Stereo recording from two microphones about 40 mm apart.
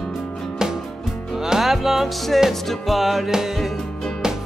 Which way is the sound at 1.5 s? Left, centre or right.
Centre.